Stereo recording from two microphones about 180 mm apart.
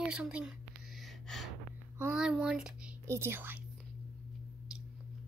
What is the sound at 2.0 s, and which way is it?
A woman's voice, 5° right (ahead or behind).